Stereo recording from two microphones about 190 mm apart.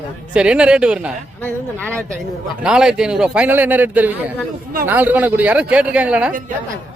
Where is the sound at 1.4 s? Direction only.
10° left (ahead or behind).